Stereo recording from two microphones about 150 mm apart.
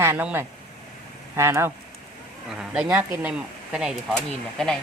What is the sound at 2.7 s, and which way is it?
Speech, 5° right (ahead or behind).